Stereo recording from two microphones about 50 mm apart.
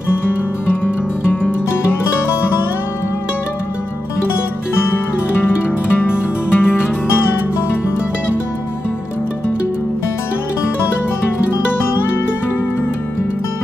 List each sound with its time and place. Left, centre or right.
0.8 s music: left
5.9 s music: left